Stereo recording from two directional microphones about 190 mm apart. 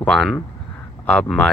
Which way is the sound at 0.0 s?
5° left (ahead or behind).